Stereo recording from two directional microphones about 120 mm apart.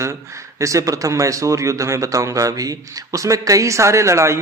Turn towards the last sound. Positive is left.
turn(degrees=-25)  # may be behind; listen again after turning